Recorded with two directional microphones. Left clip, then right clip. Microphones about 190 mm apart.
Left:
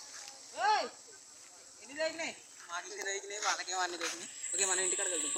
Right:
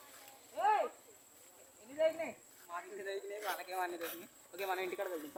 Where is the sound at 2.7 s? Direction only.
25° right (ahead or behind).